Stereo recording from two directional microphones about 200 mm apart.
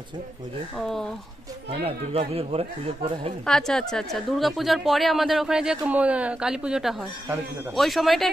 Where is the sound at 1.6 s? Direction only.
30° right (ahead or behind).